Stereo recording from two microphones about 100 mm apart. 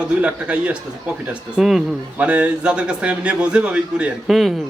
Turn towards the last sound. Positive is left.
turn(degrees=-5)  # may be behind; listen again after turning